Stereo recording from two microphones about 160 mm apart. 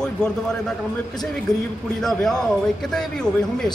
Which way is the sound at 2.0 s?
5° left (ahead or behind).